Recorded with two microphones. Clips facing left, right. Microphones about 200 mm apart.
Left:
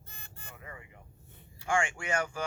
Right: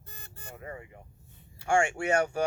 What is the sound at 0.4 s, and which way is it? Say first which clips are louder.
Vehicle: right 7 dB; 40° right (ahead or behind).